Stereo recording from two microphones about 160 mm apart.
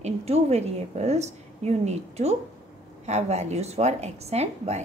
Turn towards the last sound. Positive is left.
turn(degrees=-40)  # may be behind; listen again after turning